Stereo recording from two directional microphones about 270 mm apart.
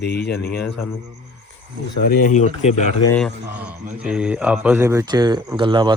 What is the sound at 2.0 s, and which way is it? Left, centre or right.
Speech, left.